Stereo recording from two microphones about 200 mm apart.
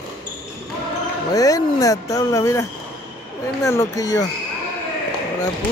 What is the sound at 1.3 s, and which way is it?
Speech, 15° left (ahead or behind).